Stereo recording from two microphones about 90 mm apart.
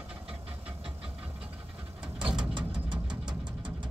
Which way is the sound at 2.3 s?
55° right (ahead or behind).